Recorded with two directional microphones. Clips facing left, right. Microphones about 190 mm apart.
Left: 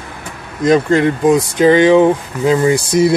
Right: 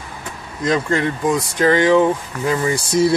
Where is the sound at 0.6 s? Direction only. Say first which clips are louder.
Left 7 dB; 20° left (ahead or behind).